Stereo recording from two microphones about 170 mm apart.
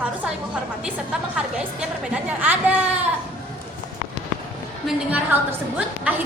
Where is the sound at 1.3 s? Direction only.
5° right (ahead or behind).